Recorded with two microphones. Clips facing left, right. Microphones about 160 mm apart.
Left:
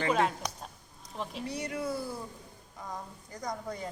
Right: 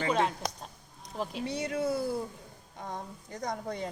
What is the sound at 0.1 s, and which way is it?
Speech, 5° left (ahead or behind).